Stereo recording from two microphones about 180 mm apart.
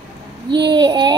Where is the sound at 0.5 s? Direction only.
25° right (ahead or behind).